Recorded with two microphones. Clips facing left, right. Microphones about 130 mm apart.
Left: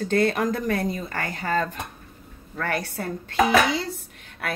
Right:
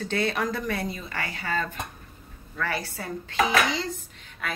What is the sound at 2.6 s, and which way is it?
Speech, 55° left (ahead or behind).